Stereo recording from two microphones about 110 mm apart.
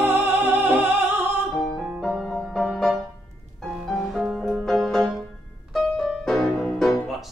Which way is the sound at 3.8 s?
Centre (ahead or behind).